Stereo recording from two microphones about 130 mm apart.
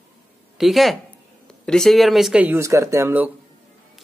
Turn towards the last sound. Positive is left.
turn(degrees=-20)  # may be behind; listen again after turning